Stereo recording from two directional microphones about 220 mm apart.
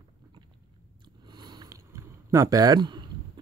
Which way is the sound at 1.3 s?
20° right (ahead or behind).